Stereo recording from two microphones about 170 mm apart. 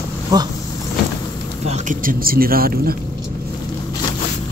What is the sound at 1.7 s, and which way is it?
Speech, 50° right (ahead or behind).